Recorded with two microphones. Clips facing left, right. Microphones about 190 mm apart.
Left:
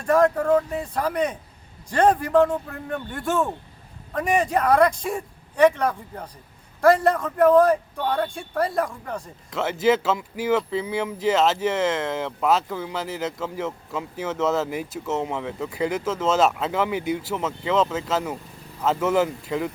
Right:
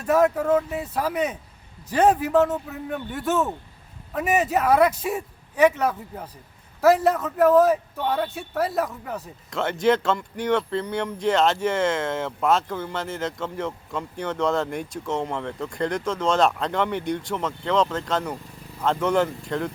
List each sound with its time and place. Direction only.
0.0 s speech: 5° right (ahead or behind)